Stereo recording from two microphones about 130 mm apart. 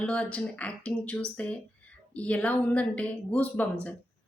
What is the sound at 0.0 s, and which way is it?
Speech, 10° left (ahead or behind).